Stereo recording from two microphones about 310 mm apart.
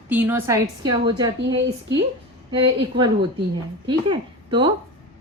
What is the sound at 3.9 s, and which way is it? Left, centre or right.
Speech, centre.